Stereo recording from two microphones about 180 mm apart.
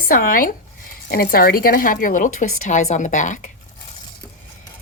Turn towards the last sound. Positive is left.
turn(degrees=45)  # may be behind; listen again after turning